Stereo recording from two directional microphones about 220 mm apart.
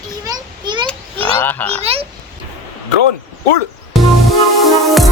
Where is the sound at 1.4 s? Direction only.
10° left (ahead or behind).